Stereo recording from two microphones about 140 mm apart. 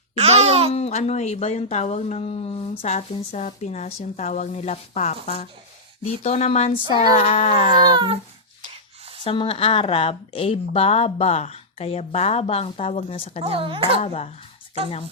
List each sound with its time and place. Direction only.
0.2 s a sound: 50° right (ahead or behind)
0.7 s a woman's voice: 50° left (ahead or behind)
2.8 s a woman's voice: 55° left (ahead or behind)
7.9 s a woman's voice: 35° right (ahead or behind)
8.7 s a sound: 40° right (ahead or behind)
9.2 s a woman's voice: 35° left (ahead or behind)
13.4 s a woman's voice: 40° right (ahead or behind)
14.0 s a woman's voice: 50° left (ahead or behind)